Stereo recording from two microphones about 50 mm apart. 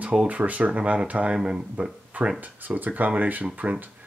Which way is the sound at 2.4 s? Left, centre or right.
Right.